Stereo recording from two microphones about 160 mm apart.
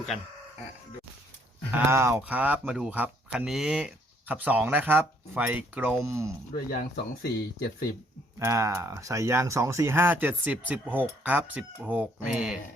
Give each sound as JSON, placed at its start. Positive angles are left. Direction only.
{"t": 1.7, "sound": "speech", "side_deg": -15}
{"t": 6.7, "sound": "speech", "side_deg": 75}
{"t": 8.4, "sound": "speech", "side_deg": -20}